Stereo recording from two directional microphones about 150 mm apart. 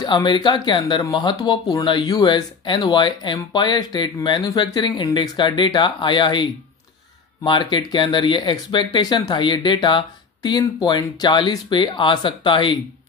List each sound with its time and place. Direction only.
0.0 s speech: 30° left (ahead or behind)